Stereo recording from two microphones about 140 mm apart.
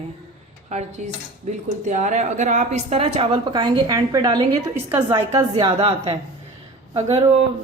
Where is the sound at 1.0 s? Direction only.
60° right (ahead or behind).